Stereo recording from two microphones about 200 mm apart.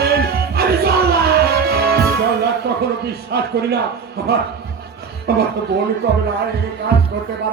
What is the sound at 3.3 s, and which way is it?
Music, 55° right (ahead or behind).